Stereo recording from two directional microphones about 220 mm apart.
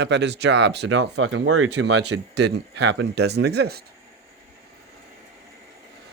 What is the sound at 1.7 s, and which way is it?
Speech, 50° right (ahead or behind).